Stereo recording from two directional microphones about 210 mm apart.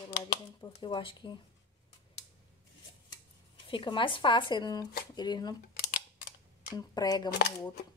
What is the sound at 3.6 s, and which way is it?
Speech, 25° left (ahead or behind).